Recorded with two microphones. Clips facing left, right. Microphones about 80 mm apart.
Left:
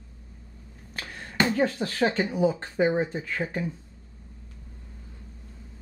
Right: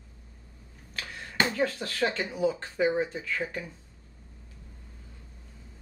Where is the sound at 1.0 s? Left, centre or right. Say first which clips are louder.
Left 1 dB; centre.